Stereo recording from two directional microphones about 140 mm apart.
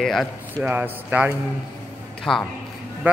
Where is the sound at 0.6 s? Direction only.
15° right (ahead or behind).